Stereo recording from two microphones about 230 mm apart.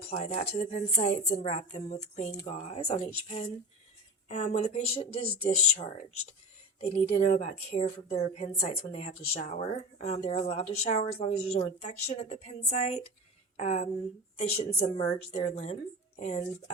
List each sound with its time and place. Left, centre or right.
0.1 s a woman's voice: left
7.0 s a woman's voice: left